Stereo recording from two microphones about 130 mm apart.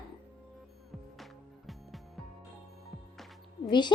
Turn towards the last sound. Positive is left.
turn(degrees=35)  # may be behind; listen again after turning